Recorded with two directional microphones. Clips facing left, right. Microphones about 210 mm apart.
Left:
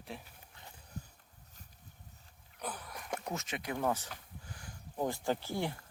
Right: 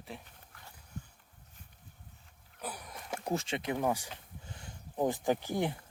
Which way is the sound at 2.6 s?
10° right (ahead or behind).